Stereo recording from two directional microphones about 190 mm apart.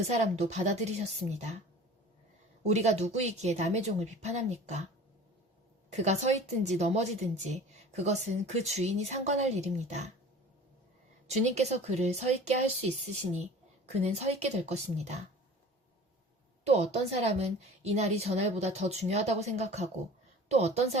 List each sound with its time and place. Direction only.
0.1 s a woman's voice: 35° right (ahead or behind)
2.6 s a woman's voice: 35° right (ahead or behind)
5.9 s a woman's voice: 35° right (ahead or behind)
11.3 s a woman's voice: 35° right (ahead or behind)
14.0 s a woman's voice: 35° right (ahead or behind)
16.6 s a woman's voice: 35° right (ahead or behind)